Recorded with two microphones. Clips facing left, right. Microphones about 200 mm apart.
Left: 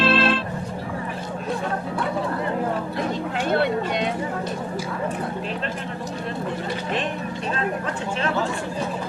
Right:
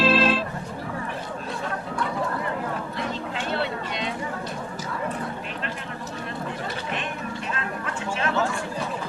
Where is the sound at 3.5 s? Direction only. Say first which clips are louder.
Left 8 dB; 55° left (ahead or behind).